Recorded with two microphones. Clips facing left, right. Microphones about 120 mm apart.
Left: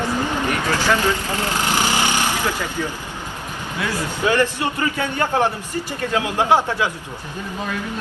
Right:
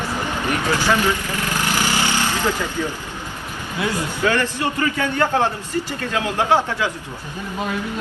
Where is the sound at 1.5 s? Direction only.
20° left (ahead or behind).